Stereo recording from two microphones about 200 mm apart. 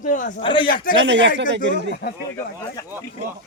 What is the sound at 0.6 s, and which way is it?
Speech, 45° left (ahead or behind).